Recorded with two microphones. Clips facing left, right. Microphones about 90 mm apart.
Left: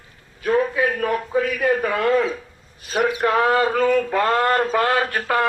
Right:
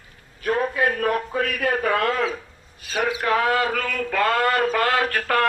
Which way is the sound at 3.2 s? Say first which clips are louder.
Left 2 dB; 25° left (ahead or behind).